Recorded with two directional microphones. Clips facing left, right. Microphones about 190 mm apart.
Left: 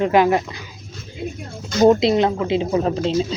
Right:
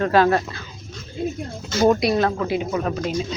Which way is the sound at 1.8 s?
20° left (ahead or behind).